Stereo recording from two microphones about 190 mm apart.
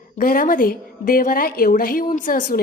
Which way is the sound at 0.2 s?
45° left (ahead or behind).